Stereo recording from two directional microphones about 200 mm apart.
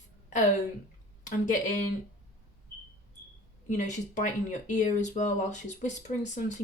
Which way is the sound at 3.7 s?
40° left (ahead or behind).